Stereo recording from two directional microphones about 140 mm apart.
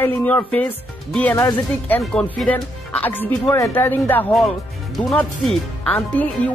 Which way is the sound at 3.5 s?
25° left (ahead or behind).